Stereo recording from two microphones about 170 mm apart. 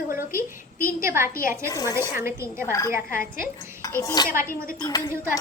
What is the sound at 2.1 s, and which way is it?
Speech, 15° right (ahead or behind).